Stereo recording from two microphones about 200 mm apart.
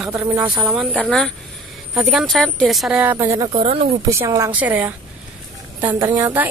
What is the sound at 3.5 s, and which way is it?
Speech, 30° right (ahead or behind).